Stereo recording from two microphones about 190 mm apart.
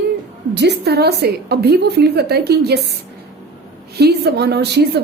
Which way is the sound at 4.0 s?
60° right (ahead or behind).